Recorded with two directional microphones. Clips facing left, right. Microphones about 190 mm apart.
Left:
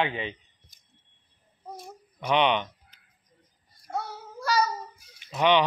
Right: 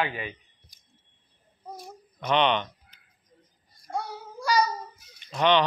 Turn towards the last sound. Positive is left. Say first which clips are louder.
# even
turn(degrees=10)  # may be behind; listen again after turning